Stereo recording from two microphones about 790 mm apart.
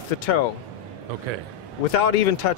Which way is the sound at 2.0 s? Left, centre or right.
Left.